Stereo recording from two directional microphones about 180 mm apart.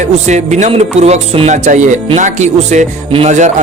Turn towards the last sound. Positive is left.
turn(degrees=-40)  # may be behind; listen again after turning